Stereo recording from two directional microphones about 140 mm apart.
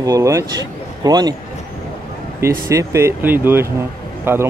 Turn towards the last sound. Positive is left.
turn(degrees=-15)  # may be behind; listen again after turning